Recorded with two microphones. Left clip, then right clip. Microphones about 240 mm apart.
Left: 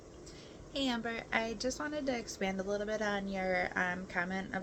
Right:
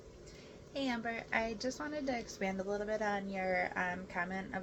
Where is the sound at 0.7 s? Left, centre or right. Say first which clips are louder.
Left 2 dB; left.